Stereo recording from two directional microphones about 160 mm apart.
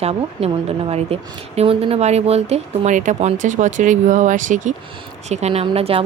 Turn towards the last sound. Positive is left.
turn(degrees=-35)  # may be behind; listen again after turning